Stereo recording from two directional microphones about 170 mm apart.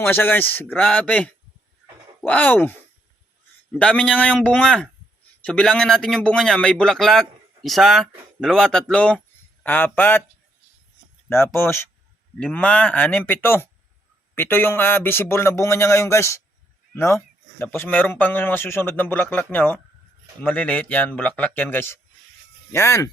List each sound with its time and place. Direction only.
0.0 s speech: 10° left (ahead or behind)
11.3 s speech: 15° left (ahead or behind)